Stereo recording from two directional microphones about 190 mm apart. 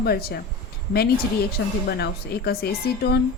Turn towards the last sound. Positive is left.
turn(degrees=55)  # may be behind; listen again after turning